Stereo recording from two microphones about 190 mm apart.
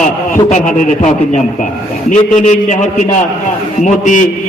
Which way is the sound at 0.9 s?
40° left (ahead or behind).